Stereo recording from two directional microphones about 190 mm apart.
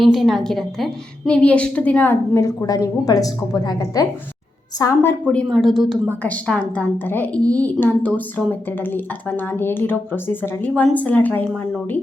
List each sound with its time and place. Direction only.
0.0 s a woman's voice: centre (ahead or behind); by 5.1 s 15° left (ahead or behind)
5.3 s a woman's voice: 5° left (ahead or behind)